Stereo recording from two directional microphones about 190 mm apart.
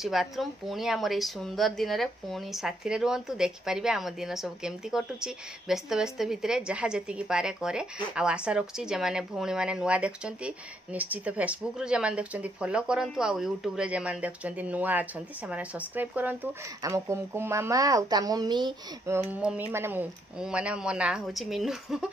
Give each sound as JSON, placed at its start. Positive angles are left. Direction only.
{"t": 0.0, "sound": "a woman's voice", "side_deg": 0}
{"t": 19.3, "sound": "a woman's voice", "side_deg": -10}